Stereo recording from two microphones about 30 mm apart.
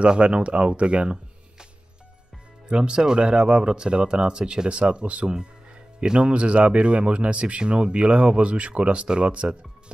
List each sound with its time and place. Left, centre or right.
0.0 s speech: right
2.7 s speech: right